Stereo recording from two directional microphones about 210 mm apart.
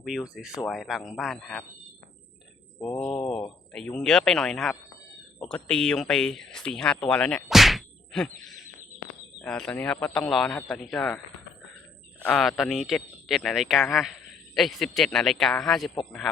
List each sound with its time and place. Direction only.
0.0 s speech: centre (ahead or behind)
2.7 s speech: 15° left (ahead or behind)
3.7 s speech: 5° left (ahead or behind)
12.2 s speech: centre (ahead or behind)